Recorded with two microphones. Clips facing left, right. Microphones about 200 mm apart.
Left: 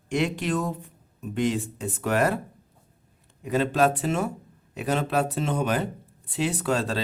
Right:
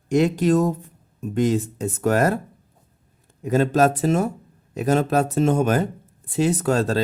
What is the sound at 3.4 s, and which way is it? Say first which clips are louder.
Speech: right 4 dB; 45° right (ahead or behind).